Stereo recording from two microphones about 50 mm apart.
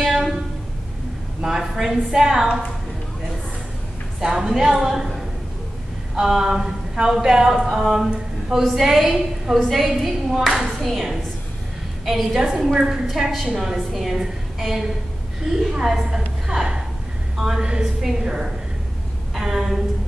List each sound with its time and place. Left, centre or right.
1.4 s a woman's voice: centre
4.2 s speech: centre
7.7 s a sound: centre
8.6 s a woman's voice: centre
9.8 s a woman's voice: centre
15.4 s a woman's voice: centre
19.3 s a sound: centre